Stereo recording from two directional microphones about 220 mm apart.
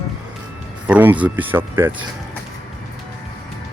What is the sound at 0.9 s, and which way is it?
Speech, 5° right (ahead or behind).